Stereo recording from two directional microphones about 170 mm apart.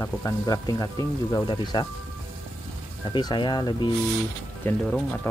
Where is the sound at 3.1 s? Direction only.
25° left (ahead or behind).